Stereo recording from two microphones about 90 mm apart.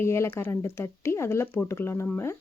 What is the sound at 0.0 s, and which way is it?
Speech, 30° left (ahead or behind).